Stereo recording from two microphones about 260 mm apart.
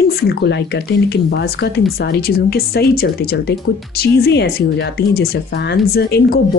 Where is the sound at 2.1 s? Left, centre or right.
Left.